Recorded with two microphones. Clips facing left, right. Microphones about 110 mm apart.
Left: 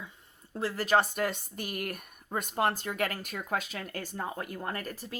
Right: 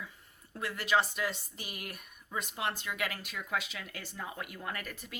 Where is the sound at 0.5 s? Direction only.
35° left (ahead or behind).